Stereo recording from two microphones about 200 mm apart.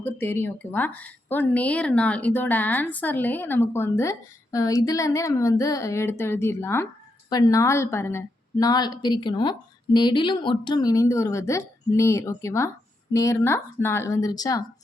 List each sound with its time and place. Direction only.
0.0 s a woman's voice: 10° left (ahead or behind)